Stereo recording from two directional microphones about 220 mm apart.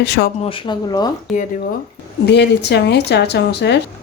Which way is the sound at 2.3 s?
50° left (ahead or behind).